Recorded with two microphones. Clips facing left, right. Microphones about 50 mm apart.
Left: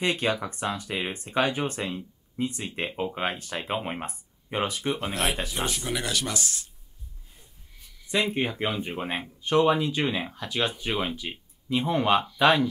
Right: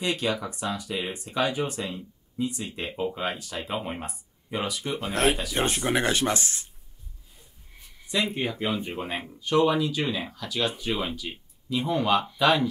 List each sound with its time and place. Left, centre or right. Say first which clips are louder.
0.0 s speech: left 1 dB; left
5.1 s speech: right 4 dB; right
8.4 s speech: left 1 dB; left
8.7 s speech: even; centre
9.4 s speech: even; left